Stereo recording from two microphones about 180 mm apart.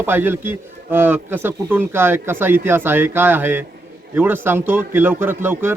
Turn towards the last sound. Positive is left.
turn(degrees=-15)  # may be behind; listen again after turning